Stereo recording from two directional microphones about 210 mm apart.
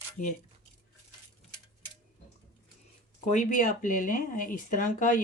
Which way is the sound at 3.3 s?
35° left (ahead or behind).